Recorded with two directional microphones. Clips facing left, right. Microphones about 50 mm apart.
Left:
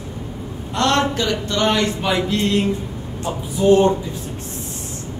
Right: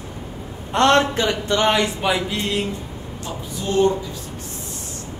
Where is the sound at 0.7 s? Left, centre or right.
Right.